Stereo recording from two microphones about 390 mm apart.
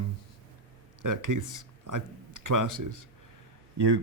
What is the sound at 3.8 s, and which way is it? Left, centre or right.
Speech, right.